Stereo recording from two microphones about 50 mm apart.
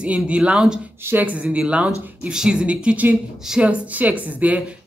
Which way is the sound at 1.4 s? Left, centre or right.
Right.